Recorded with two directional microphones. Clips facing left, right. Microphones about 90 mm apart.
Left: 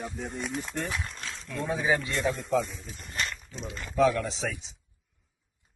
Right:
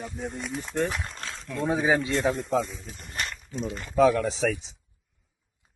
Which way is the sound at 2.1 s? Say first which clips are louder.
Right 4 dB; 50° right (ahead or behind).